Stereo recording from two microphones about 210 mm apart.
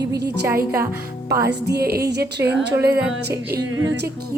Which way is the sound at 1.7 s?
50° right (ahead or behind).